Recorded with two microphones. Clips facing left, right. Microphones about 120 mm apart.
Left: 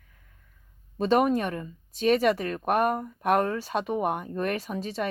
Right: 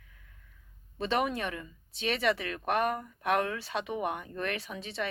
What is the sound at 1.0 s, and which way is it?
Speech, 45° left (ahead or behind).